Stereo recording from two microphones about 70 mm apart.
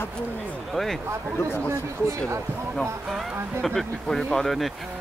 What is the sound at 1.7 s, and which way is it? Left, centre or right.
Speech, right.